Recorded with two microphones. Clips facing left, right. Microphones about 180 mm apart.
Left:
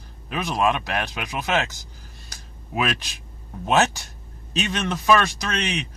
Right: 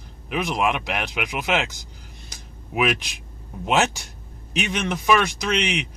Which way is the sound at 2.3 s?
15° right (ahead or behind).